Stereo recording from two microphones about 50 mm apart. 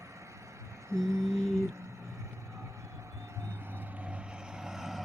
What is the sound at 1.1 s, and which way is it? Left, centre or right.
Lullaby, right.